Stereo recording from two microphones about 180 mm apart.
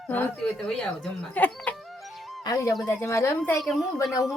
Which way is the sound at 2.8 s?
15° left (ahead or behind).